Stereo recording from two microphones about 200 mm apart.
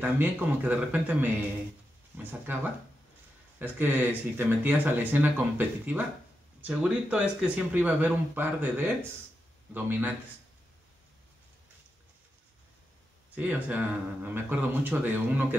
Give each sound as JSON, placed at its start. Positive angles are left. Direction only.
{"t": 0.0, "sound": "speech", "side_deg": -10}
{"t": 3.5, "sound": "speech", "side_deg": -10}
{"t": 13.3, "sound": "speech", "side_deg": -5}